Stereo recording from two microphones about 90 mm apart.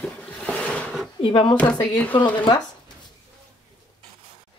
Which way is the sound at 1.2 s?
70° left (ahead or behind).